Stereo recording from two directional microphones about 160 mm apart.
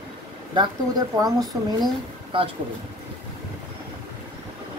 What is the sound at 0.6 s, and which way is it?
Speech, 25° right (ahead or behind).